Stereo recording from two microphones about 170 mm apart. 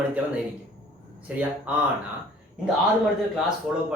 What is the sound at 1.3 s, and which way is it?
Speech, 5° right (ahead or behind).